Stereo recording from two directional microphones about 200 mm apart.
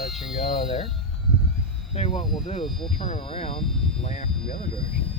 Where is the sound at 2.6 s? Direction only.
Centre (ahead or behind).